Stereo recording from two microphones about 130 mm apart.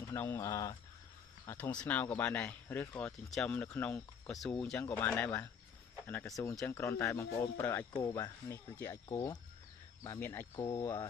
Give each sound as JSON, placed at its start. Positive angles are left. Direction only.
{"t": 0.1, "sound": "speech", "side_deg": 15}
{"t": 1.6, "sound": "speech", "side_deg": 10}
{"t": 3.1, "sound": "speech", "side_deg": 5}
{"t": 6.4, "sound": "speech", "side_deg": 15}